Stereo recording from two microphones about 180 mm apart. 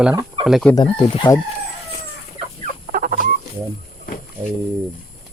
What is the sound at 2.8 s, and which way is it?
Chicken, 45° right (ahead or behind).